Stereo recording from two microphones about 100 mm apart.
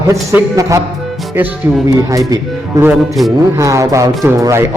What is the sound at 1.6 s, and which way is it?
Speech, 20° right (ahead or behind).